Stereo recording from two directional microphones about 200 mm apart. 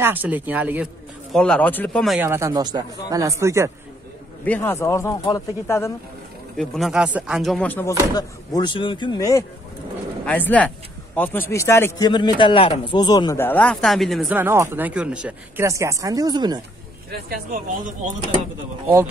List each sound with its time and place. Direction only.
0.0 s speech: 10° right (ahead or behind)
1.3 s a man's voice: 5° left (ahead or behind)
2.1 s speech: 10° right (ahead or behind)
4.5 s speech: 10° left (ahead or behind)
6.5 s a man's voice: centre (ahead or behind)
8.1 s speech: 20° left (ahead or behind)
10.2 s a man's voice: 10° left (ahead or behind); by 16.6 s 20° right (ahead or behind)
17.3 s speech: 45° right (ahead or behind)